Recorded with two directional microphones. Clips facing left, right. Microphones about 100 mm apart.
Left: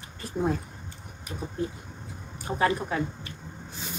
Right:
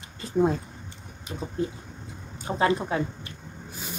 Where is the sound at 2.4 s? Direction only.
20° right (ahead or behind).